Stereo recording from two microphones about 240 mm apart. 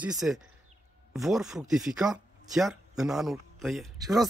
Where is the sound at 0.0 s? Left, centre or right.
Centre.